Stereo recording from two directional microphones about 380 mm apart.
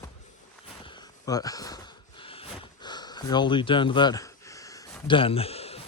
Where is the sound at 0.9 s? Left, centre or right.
Centre.